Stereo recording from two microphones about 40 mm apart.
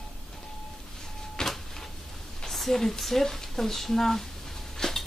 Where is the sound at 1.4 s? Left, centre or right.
Centre.